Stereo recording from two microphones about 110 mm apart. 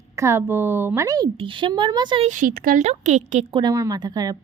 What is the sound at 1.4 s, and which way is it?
Speech, 50° right (ahead or behind).